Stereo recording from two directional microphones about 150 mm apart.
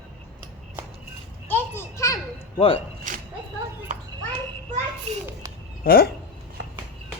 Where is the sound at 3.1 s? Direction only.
60° right (ahead or behind).